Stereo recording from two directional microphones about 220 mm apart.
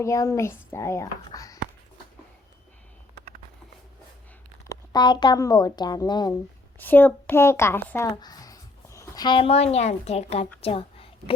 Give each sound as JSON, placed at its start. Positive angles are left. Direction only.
{"t": 0.0, "sound": "speech", "side_deg": 15}
{"t": 4.7, "sound": "a woman's voice", "side_deg": 20}